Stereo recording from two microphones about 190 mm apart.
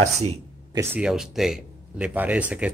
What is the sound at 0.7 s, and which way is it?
Speech, 15° right (ahead or behind).